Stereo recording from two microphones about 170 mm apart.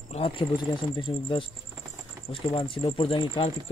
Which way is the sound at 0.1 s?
35° left (ahead or behind).